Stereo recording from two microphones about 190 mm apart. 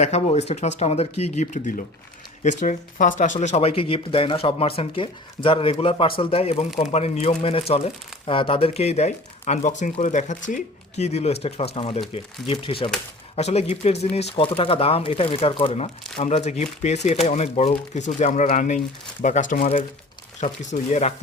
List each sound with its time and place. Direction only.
0.0 s speech: 35° left (ahead or behind)